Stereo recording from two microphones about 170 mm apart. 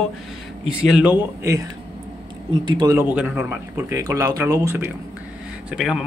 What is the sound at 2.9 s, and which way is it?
Speech, 10° right (ahead or behind).